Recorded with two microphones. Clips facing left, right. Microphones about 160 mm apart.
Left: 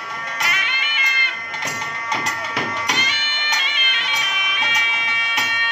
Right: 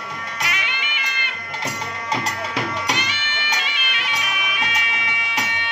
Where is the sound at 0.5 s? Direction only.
15° right (ahead or behind).